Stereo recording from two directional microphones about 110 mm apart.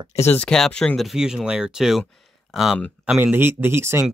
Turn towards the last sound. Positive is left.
turn(degrees=-20)  # may be behind; listen again after turning